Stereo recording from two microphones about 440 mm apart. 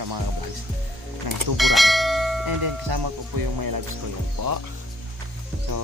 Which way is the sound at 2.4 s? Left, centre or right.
Right.